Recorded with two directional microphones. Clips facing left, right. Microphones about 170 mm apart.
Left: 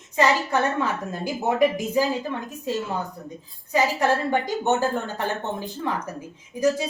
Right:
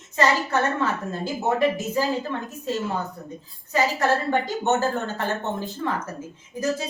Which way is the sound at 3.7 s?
15° left (ahead or behind).